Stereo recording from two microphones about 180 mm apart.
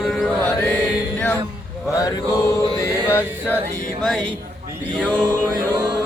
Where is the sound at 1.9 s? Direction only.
20° left (ahead or behind).